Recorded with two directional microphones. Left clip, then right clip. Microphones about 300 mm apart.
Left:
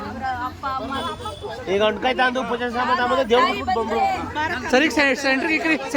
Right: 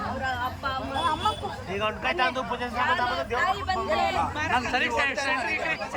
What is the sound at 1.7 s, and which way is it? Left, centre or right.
Speech, centre.